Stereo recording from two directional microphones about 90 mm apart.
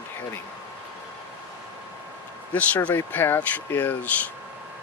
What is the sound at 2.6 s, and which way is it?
Speech, 20° left (ahead or behind).